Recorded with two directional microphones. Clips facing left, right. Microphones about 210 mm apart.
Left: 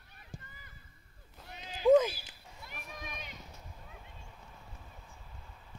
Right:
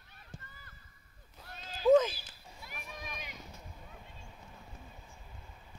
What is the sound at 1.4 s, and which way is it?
Cat, 15° left (ahead or behind).